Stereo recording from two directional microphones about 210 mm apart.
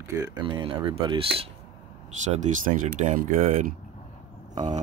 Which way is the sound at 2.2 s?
35° right (ahead or behind).